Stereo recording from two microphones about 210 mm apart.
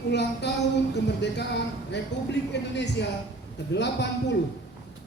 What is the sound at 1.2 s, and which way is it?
A man's voice, 55° left (ahead or behind).